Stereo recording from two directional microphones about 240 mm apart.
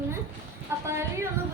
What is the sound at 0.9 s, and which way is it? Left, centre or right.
Speech, centre.